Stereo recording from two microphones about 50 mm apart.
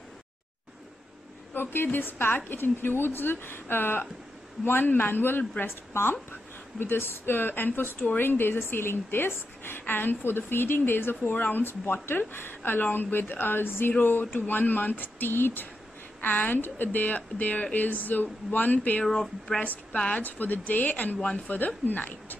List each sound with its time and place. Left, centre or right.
1.5 s a woman's voice: left
14.3 s speech: left
19.0 s speech: centre
19.6 s speech: left